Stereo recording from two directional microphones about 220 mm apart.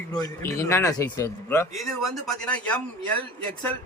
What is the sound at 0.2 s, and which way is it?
Speech, 15° left (ahead or behind).